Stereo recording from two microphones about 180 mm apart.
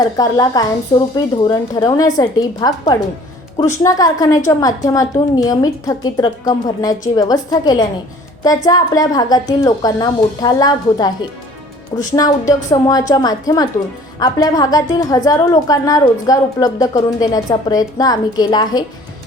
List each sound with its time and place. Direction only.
0.0 s a woman's voice: 20° left (ahead or behind)
12.1 s a woman's voice: 20° left (ahead or behind)